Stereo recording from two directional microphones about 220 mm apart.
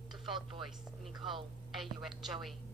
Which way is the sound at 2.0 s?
Centre (ahead or behind).